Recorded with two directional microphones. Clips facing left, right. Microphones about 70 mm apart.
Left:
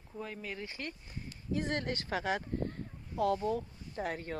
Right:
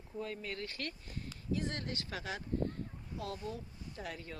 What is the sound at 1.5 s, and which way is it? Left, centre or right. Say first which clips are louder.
Speech: left 7 dB; left.